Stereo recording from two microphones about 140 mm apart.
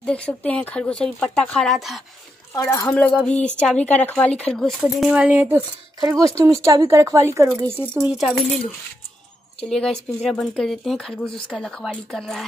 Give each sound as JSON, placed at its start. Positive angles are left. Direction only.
{"t": 0.0, "sound": "speech", "side_deg": 10}
{"t": 2.5, "sound": "a woman's voice", "side_deg": 20}
{"t": 2.9, "sound": "speech", "side_deg": 10}
{"t": 5.9, "sound": "speech", "side_deg": -25}
{"t": 8.1, "sound": "speech", "side_deg": -5}
{"t": 9.7, "sound": "speech", "side_deg": 5}